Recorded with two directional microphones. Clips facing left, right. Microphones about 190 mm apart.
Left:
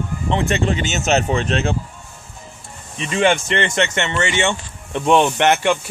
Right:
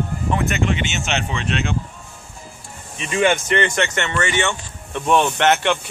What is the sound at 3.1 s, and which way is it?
Speech, 30° left (ahead or behind).